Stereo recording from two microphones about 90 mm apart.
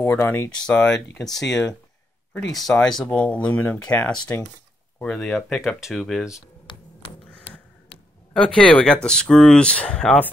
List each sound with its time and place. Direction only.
0.0 s speech: 25° left (ahead or behind)
0.7 s speech: 10° left (ahead or behind)
2.5 s speech: 5° left (ahead or behind)
8.3 s speech: 10° left (ahead or behind)